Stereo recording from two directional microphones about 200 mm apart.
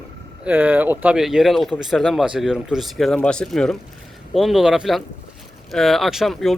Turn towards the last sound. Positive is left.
turn(degrees=0)  # may be behind; listen again after turning